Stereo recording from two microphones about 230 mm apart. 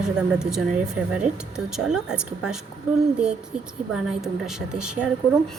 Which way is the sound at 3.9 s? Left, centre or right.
Centre.